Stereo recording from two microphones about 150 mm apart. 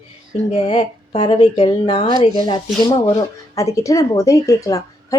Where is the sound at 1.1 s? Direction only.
45° left (ahead or behind).